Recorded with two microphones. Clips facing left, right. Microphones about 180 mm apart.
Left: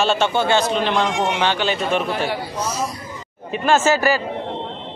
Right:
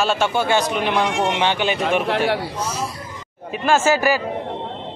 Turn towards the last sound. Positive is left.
turn(degrees=-10)  # may be behind; listen again after turning